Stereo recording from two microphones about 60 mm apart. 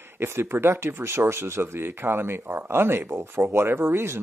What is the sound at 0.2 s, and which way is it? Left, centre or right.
Speech, right.